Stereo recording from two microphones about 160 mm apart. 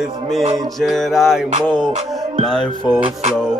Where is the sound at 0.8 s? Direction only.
Centre (ahead or behind).